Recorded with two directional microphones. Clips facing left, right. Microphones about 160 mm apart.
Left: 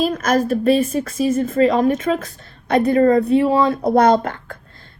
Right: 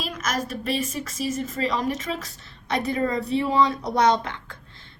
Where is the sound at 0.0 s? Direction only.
55° left (ahead or behind).